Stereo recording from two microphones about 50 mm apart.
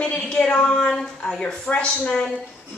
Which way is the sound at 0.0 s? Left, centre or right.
Left.